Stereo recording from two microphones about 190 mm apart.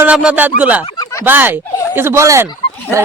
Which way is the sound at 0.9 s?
20° left (ahead or behind).